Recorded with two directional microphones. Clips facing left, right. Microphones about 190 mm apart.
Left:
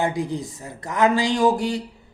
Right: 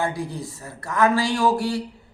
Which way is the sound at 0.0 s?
20° left (ahead or behind).